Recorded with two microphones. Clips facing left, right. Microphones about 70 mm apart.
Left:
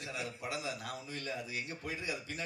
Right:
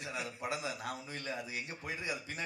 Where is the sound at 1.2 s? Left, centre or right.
Right.